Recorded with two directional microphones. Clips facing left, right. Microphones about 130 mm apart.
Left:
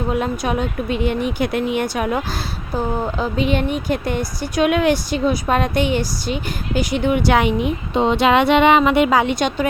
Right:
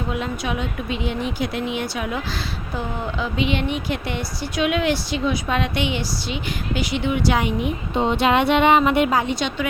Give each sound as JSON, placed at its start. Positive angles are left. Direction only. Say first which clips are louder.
{"t": 0.1, "sound": "speech", "louder": "left 6 dB", "side_deg": 45}
{"t": 2.7, "sound": "speech", "louder": "left 6 dB", "side_deg": 40}
{"t": 7.9, "sound": "speech", "louder": "left 3 dB", "side_deg": 90}